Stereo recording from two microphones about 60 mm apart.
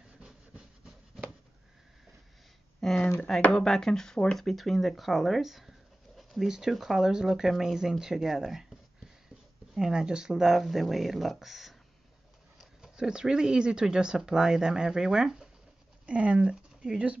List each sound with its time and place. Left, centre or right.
0.2 s rub: centre
2.8 s a sound: centre
3.5 s speech: centre
4.5 s speech: centre
9.8 s speech: centre
16.1 s speech: right